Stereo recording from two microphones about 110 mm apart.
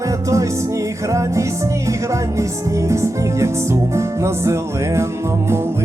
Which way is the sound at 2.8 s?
25° right (ahead or behind).